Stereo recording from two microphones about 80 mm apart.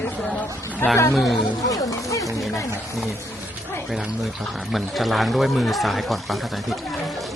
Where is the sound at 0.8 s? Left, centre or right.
Left.